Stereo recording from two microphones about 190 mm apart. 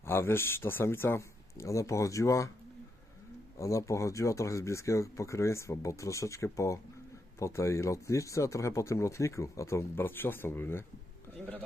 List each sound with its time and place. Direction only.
0.0 s speech: 10° left (ahead or behind)
3.6 s a man's voice: 15° left (ahead or behind)